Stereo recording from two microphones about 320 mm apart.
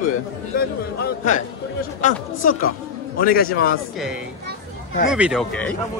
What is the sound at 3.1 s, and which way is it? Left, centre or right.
Speech, left.